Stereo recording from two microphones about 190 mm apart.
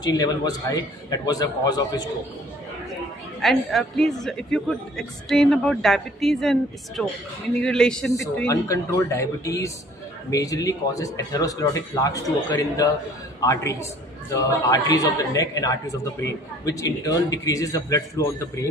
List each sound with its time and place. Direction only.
0.0 s a man's voice: 20° left (ahead or behind)
3.3 s a woman's voice: centre (ahead or behind)
8.5 s speech: 15° left (ahead or behind)
14.9 s speech: 20° left (ahead or behind)